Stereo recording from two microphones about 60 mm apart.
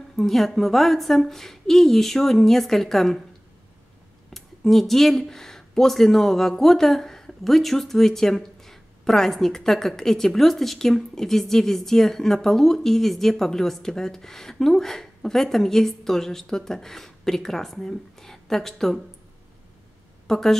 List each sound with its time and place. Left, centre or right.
0.1 s speech: centre
4.3 s speech: centre
20.2 s a woman's voice: centre